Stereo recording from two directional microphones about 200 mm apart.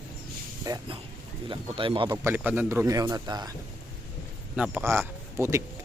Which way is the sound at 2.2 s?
10° right (ahead or behind).